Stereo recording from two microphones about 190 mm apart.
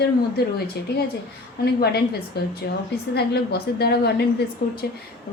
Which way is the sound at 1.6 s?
55° left (ahead or behind).